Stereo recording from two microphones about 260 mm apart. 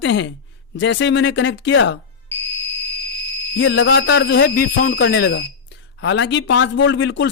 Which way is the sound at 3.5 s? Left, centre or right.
Left.